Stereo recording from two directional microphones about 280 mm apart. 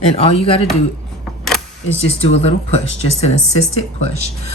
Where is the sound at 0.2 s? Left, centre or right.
Left.